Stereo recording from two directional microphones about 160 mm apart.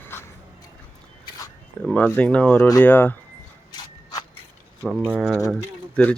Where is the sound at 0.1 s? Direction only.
15° left (ahead or behind).